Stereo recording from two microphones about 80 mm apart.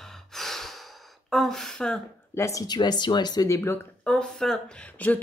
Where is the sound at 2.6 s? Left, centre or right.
Left.